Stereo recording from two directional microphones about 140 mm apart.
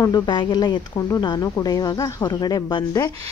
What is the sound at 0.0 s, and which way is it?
A woman's voice, 30° left (ahead or behind).